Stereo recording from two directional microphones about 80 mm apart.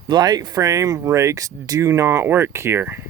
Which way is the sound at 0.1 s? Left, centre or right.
Right.